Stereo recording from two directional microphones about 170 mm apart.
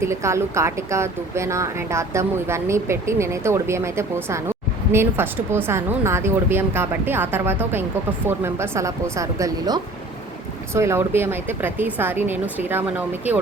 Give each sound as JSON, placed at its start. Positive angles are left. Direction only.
{"t": 0.0, "sound": "a woman's voice", "side_deg": -15}